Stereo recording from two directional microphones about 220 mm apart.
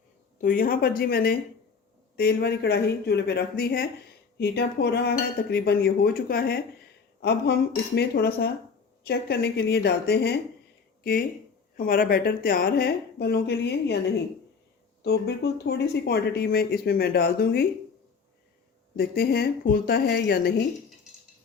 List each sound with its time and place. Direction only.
0.4 s speech: 40° left (ahead or behind)
15.0 s speech: 50° left (ahead or behind)
18.9 s speech: 45° left (ahead or behind)